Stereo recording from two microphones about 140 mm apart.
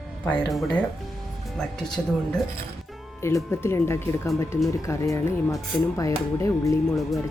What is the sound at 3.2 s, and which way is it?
Speech, 20° left (ahead or behind).